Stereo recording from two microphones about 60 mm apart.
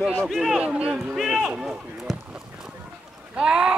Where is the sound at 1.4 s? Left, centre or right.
Centre.